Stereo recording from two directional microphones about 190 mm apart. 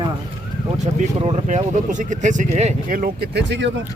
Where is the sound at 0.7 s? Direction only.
35° right (ahead or behind); by 3.8 s 70° right (ahead or behind).